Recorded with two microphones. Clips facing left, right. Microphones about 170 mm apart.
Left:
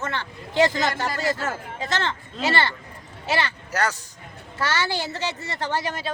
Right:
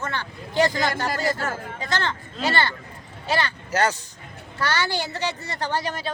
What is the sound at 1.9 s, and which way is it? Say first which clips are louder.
Speech: even; centre (ahead or behind).